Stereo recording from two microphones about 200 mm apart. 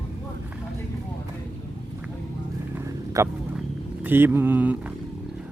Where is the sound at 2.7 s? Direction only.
15° right (ahead or behind).